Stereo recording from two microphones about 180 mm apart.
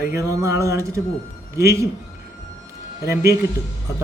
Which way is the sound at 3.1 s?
15° right (ahead or behind).